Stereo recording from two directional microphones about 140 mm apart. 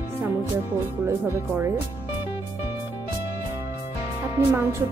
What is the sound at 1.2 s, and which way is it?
Speech, 15° right (ahead or behind).